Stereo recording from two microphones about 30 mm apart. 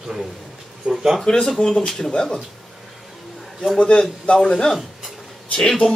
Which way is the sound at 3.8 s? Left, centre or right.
Left.